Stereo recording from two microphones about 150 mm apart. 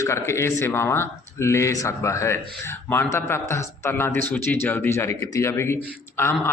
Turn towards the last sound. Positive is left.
turn(degrees=15)  # may be behind; listen again after turning